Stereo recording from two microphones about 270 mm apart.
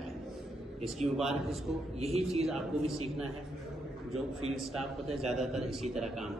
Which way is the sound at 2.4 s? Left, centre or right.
Centre.